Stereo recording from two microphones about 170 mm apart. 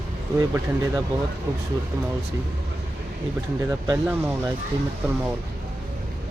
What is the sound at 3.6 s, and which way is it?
Speech, 15° right (ahead or behind).